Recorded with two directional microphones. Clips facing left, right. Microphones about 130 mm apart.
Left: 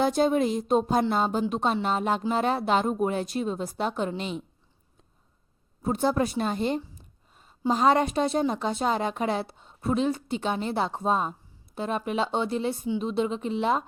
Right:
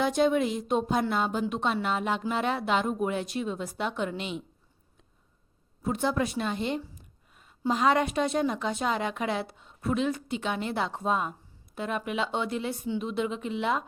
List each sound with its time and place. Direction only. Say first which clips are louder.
0.0 s a woman's voice: left 2 dB; 35° left (ahead or behind)
5.8 s a woman's voice: left 3 dB; 35° left (ahead or behind)